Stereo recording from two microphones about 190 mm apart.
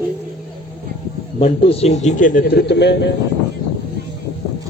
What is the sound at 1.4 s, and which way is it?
A man's voice, 30° left (ahead or behind).